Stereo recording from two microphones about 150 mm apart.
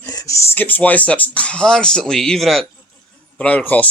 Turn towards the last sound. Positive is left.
turn(degrees=10)  # may be behind; listen again after turning